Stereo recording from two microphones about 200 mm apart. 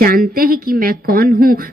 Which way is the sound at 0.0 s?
45° right (ahead or behind).